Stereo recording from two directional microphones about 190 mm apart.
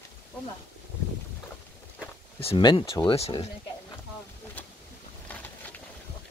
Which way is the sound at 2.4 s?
25° left (ahead or behind).